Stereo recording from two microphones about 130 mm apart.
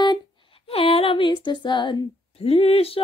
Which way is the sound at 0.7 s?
45° left (ahead or behind).